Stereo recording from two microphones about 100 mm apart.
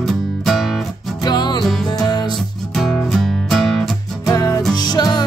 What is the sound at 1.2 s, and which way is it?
Music, 45° left (ahead or behind).